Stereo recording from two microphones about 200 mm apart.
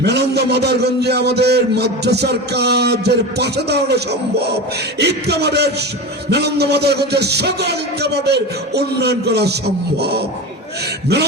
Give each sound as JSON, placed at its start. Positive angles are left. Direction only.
{"t": 0.0, "sound": "a man's voice", "side_deg": -55}